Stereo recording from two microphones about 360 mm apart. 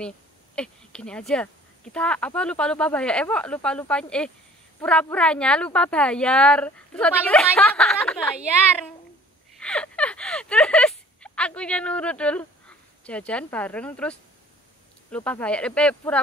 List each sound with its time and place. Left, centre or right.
0.6 s speech: centre
9.6 s a sound: centre
15.0 s speech: centre